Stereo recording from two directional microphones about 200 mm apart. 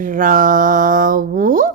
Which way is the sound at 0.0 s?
45° right (ahead or behind).